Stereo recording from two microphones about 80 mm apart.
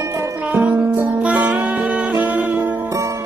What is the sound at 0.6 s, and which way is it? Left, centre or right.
Music, centre.